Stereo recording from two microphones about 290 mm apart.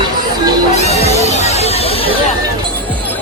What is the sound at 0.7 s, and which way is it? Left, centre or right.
Music, left.